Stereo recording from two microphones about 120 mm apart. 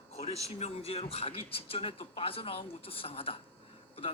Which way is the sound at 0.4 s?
60° left (ahead or behind).